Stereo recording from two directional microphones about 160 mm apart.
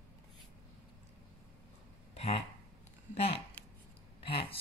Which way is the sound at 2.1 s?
40° left (ahead or behind).